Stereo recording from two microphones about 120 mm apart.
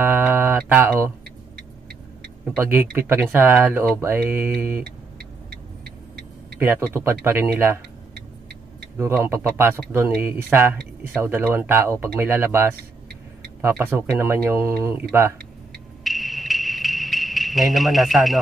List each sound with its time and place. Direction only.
0.0 s mantra: 15° right (ahead or behind)
0.6 s speech: 15° right (ahead or behind)
2.4 s speech: 15° right (ahead or behind)
6.6 s speech: 20° right (ahead or behind)
9.2 s speech: 20° right (ahead or behind)
16.0 s music: centre (ahead or behind)